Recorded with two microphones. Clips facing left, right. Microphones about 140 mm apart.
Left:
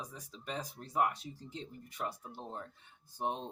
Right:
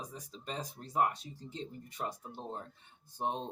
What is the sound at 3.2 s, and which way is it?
Speech, 30° right (ahead or behind).